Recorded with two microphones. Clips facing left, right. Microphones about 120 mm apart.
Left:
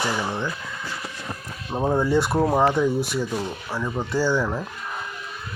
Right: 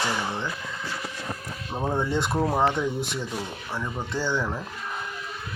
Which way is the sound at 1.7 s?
20° left (ahead or behind).